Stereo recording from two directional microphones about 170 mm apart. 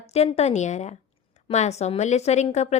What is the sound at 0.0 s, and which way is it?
A woman's voice, 40° left (ahead or behind).